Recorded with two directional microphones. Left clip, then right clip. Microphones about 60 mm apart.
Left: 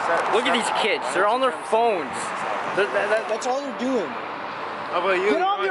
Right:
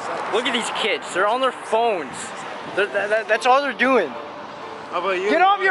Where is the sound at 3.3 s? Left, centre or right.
Right.